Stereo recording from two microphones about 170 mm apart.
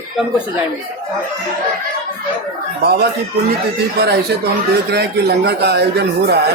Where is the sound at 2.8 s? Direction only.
70° right (ahead or behind).